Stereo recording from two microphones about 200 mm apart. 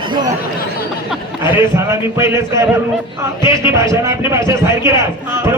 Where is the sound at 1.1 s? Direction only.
10° right (ahead or behind).